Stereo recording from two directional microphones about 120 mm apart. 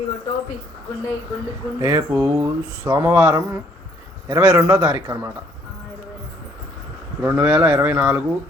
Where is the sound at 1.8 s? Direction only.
20° right (ahead or behind).